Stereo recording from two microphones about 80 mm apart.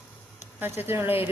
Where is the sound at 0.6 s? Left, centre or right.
Right.